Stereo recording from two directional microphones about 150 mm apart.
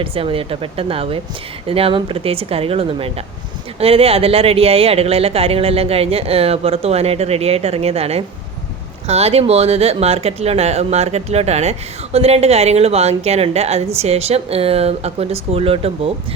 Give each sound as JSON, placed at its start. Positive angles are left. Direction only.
{"t": 0.0, "sound": "speech", "side_deg": -40}